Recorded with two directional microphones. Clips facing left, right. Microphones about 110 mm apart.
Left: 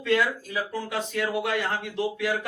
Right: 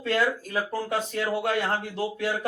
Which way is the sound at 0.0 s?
40° right (ahead or behind).